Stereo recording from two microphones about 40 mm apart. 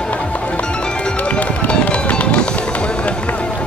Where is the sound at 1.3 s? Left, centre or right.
Left.